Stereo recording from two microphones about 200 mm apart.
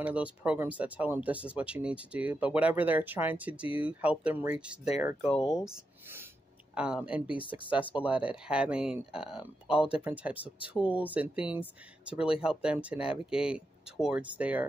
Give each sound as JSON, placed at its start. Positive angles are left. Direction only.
{"t": 0.0, "sound": "speech", "side_deg": -5}
{"t": 5.2, "sound": "speech", "side_deg": 30}
{"t": 5.5, "sound": "speech", "side_deg": -5}
{"t": 7.3, "sound": "speech", "side_deg": 25}
{"t": 7.9, "sound": "speech", "side_deg": -5}